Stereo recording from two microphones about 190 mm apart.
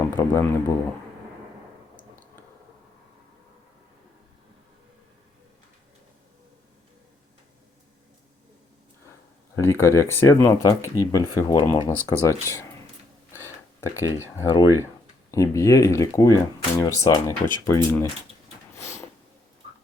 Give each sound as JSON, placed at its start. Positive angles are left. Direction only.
{"t": 0.1, "sound": "speech", "side_deg": 10}
{"t": 9.6, "sound": "speech", "side_deg": 15}
{"t": 13.8, "sound": "speech", "side_deg": 15}
{"t": 18.8, "sound": "a sound", "side_deg": 35}